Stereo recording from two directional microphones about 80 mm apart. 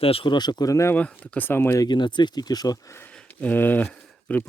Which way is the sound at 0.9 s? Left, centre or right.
Centre.